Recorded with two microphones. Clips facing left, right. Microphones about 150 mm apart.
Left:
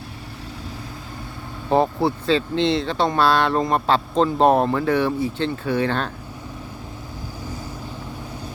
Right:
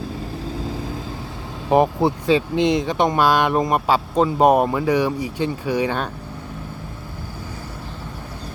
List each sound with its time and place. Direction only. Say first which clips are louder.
1.7 s speech: right 2 dB; 15° right (ahead or behind)